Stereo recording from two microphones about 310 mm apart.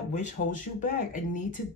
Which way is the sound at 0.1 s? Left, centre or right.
Left.